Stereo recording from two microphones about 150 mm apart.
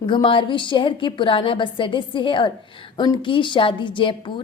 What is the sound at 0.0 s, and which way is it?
A woman's voice, 35° left (ahead or behind).